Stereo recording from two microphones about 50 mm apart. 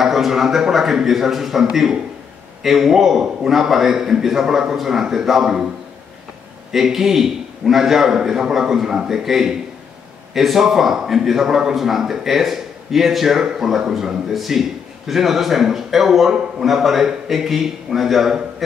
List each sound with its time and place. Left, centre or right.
0.0 s a man's voice: centre
6.7 s a man's voice: centre